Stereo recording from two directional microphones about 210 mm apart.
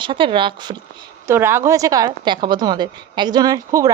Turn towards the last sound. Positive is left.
turn(degrees=-15)  # may be behind; listen again after turning